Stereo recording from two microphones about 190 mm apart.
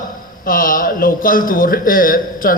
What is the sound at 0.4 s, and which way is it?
Speech, 45° left (ahead or behind).